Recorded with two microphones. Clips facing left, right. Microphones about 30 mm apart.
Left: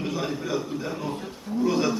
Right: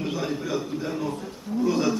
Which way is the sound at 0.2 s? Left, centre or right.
Centre.